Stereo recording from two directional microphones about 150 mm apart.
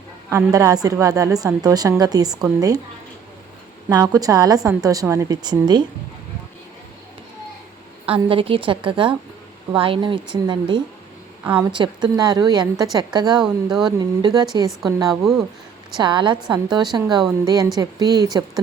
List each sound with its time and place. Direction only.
0.3 s a woman's voice: 20° right (ahead or behind)
3.8 s a woman's voice: 25° right (ahead or behind)
8.0 s a woman's voice: 40° right (ahead or behind)
13.4 s speech: 5° right (ahead or behind)
14.0 s a woman's voice: 25° right (ahead or behind)
15.1 s speech: centre (ahead or behind)
16.0 s a woman's voice: 30° right (ahead or behind)